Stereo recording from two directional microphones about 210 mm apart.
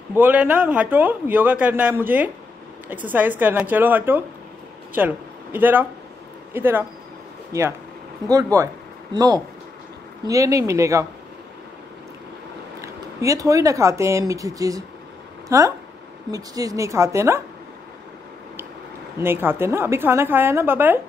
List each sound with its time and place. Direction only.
0.1 s a man's voice: 10° right (ahead or behind)
12.8 s speech: 15° right (ahead or behind)
19.1 s speech: 10° right (ahead or behind)